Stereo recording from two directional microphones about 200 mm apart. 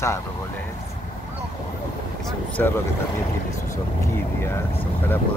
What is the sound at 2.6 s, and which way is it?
Speech, 5° left (ahead or behind).